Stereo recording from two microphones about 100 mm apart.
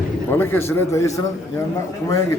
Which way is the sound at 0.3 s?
20° left (ahead or behind).